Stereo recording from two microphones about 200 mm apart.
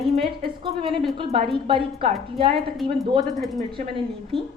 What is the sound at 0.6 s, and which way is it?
A woman's voice, 25° right (ahead or behind).